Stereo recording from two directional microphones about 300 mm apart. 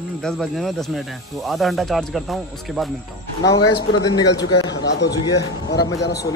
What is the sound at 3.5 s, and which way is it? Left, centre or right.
Speech, centre.